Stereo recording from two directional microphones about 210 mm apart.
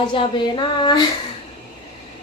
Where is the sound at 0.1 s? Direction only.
20° left (ahead or behind).